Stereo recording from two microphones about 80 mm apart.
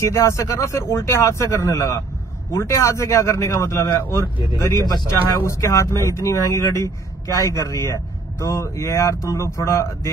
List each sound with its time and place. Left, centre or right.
0.0 s speech: left